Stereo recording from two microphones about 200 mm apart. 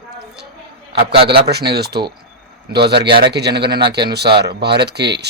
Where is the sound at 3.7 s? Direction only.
20° right (ahead or behind).